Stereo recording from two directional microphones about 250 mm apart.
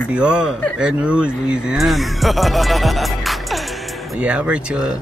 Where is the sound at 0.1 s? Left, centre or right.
Centre.